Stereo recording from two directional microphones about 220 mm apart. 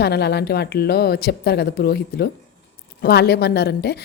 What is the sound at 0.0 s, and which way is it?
A woman's voice, 45° left (ahead or behind).